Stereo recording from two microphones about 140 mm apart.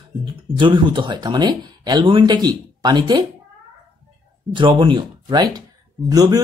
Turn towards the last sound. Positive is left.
turn(degrees=-25)  # may be behind; listen again after turning